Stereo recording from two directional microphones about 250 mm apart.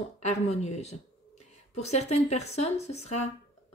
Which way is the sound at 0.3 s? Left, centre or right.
Left.